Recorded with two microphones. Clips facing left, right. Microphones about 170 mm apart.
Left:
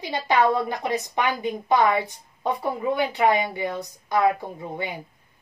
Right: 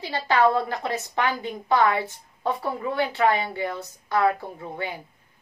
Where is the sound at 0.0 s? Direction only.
15° left (ahead or behind).